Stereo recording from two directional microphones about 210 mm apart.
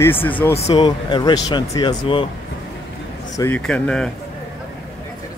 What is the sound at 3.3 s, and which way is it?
Speech, 10° left (ahead or behind).